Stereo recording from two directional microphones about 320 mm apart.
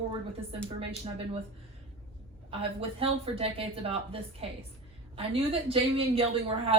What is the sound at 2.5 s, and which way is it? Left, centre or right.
Speech, centre.